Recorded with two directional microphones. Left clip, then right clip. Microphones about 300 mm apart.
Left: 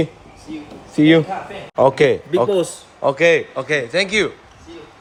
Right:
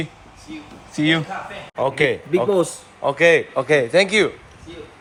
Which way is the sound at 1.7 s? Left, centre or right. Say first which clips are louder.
Left 6 dB; centre.